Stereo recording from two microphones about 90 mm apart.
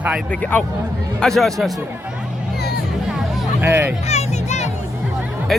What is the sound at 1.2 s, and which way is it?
Speech, 5° left (ahead or behind).